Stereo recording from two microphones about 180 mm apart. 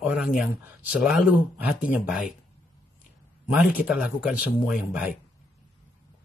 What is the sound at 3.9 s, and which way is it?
Speech, 5° right (ahead or behind).